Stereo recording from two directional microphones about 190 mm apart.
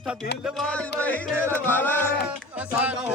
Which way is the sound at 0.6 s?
5° left (ahead or behind).